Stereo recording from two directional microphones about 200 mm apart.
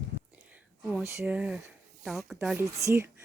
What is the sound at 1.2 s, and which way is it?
Speech, 5° right (ahead or behind).